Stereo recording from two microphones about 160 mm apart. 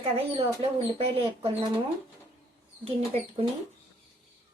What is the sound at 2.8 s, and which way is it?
Speech, 35° right (ahead or behind).